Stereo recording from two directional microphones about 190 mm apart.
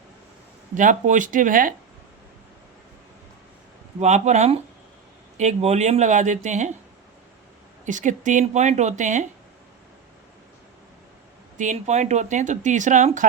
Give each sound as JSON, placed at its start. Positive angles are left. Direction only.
{"t": 0.7, "sound": "speech", "side_deg": -40}
{"t": 4.0, "sound": "speech", "side_deg": -35}
{"t": 7.9, "sound": "speech", "side_deg": -40}
{"t": 11.5, "sound": "speech", "side_deg": -40}